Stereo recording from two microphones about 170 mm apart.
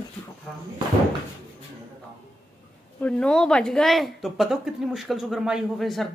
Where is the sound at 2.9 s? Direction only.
5° left (ahead or behind).